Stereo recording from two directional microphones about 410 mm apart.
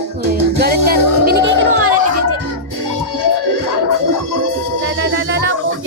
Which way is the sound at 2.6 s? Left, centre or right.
Right.